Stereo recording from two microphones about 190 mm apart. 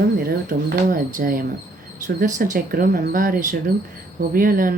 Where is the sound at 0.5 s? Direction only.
50° right (ahead or behind).